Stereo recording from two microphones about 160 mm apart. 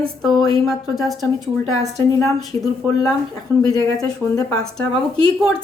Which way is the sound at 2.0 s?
20° left (ahead or behind).